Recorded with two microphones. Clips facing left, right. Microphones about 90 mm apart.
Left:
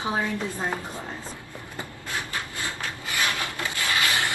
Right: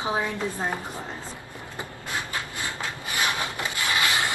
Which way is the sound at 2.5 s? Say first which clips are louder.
Right 1 dB; 20° right (ahead or behind).